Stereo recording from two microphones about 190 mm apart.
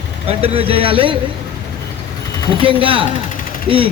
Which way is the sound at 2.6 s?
25° right (ahead or behind).